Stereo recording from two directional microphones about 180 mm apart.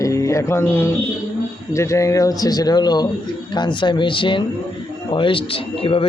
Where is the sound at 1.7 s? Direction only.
15° left (ahead or behind).